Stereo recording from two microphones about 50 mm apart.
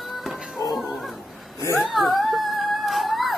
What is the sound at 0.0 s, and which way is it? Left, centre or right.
Music, centre.